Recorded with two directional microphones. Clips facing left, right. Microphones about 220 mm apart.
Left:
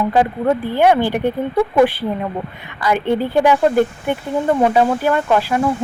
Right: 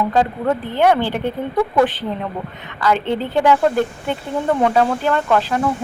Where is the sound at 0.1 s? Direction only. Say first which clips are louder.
Left 2 dB; 10° left (ahead or behind).